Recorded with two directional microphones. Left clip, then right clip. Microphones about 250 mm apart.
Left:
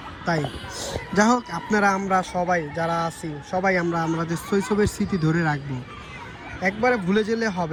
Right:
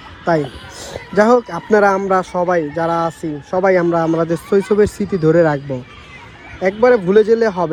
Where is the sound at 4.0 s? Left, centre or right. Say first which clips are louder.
Right 10 dB; centre.